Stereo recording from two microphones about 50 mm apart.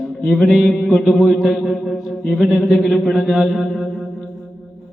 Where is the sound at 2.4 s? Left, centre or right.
Left.